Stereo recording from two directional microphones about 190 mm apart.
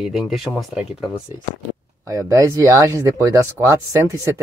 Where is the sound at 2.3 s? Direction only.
15° right (ahead or behind).